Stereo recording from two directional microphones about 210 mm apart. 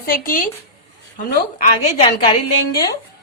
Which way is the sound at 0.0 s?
45° left (ahead or behind).